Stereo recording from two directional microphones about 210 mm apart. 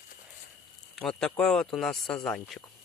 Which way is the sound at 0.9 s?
5° left (ahead or behind).